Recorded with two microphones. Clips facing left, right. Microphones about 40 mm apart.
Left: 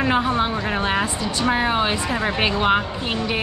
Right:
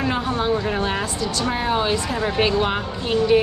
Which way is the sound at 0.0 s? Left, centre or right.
Left.